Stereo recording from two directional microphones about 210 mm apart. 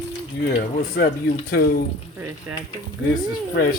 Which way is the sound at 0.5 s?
50° left (ahead or behind).